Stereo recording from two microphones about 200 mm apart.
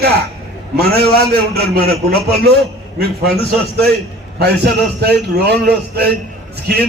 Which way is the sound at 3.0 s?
55° right (ahead or behind).